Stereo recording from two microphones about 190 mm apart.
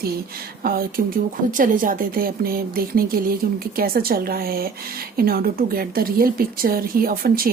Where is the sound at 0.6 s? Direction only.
50° right (ahead or behind).